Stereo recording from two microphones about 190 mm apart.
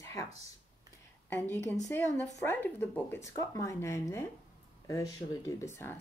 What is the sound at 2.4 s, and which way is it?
Speech, 10° left (ahead or behind).